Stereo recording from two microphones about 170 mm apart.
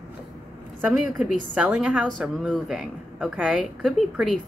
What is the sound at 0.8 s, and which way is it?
A woman's voice, 5° right (ahead or behind).